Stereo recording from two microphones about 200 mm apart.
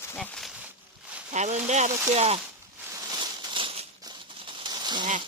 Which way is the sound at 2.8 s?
15° right (ahead or behind).